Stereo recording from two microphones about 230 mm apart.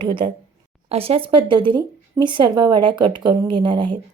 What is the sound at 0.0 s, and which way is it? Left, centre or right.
Speech, right.